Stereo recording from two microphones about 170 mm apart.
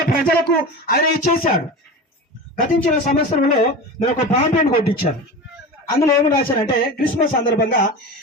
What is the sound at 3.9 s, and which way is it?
A man's voice, 40° left (ahead or behind).